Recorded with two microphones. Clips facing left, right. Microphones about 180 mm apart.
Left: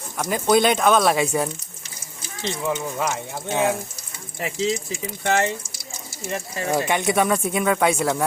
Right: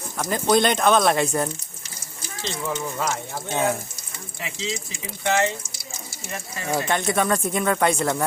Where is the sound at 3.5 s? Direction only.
15° left (ahead or behind).